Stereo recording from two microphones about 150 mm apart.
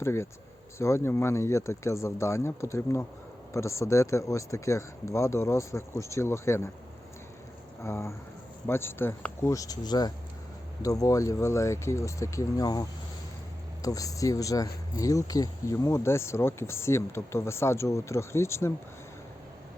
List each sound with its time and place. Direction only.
0.0 s speech: 15° left (ahead or behind)
7.9 s speech: 15° left (ahead or behind)